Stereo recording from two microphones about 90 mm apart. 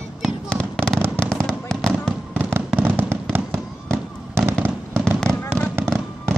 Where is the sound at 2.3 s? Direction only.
20° right (ahead or behind).